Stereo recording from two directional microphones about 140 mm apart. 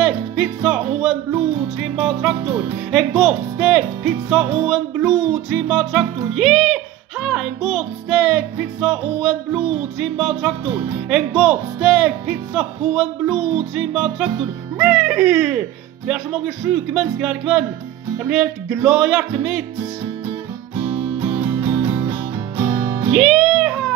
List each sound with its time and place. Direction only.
0.0 s music: 5° right (ahead or behind)
2.9 s speech: centre (ahead or behind)
4.6 s music: centre (ahead or behind)
20.7 s music: 35° right (ahead or behind)
23.1 s music: centre (ahead or behind)